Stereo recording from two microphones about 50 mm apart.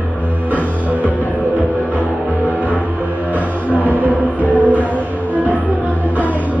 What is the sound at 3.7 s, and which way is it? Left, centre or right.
Music, right.